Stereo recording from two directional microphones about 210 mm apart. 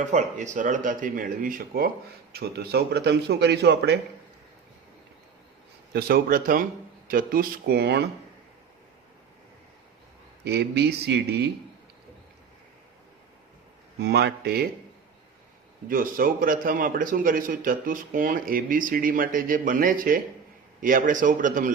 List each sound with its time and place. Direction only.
0.0 s a man's voice: 35° right (ahead or behind); by 3.9 s 50° right (ahead or behind)
5.9 s speech: 50° right (ahead or behind)
10.4 s speech: 50° right (ahead or behind)
14.0 s speech: 50° right (ahead or behind)
15.9 s a man's voice: 40° right (ahead or behind)